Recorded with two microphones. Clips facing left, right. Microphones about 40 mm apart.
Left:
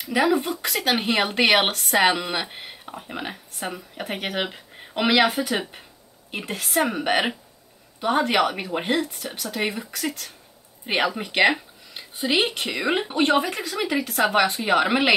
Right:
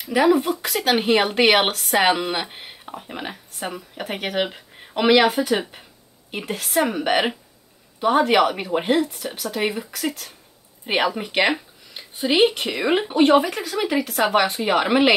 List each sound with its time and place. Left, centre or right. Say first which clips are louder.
0.0 s speech: right 3 dB; centre